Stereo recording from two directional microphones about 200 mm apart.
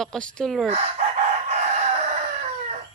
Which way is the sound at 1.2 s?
35° right (ahead or behind).